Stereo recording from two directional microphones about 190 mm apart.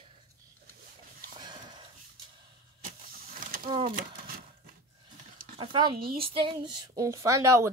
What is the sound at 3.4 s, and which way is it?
Wild animals, 45° right (ahead or behind).